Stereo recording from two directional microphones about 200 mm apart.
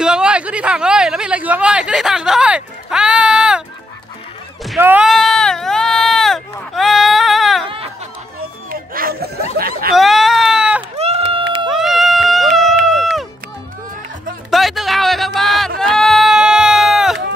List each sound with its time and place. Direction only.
0.0 s speech: 5° right (ahead or behind)
4.7 s a sound: 10° right (ahead or behind)
7.6 s music: 25° right (ahead or behind)
8.6 s a sound: 45° right (ahead or behind)
9.9 s baby cry: centre (ahead or behind)
11.0 s run: 30° right (ahead or behind)
11.7 s run: centre (ahead or behind)
14.5 s music: centre (ahead or behind)